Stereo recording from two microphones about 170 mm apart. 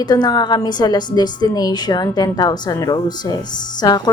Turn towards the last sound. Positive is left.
turn(degrees=20)  # may be behind; listen again after turning